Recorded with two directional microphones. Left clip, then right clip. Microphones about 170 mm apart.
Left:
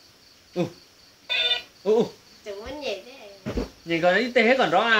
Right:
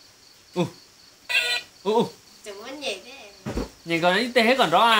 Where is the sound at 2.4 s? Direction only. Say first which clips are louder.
Left 1 dB; 20° left (ahead or behind).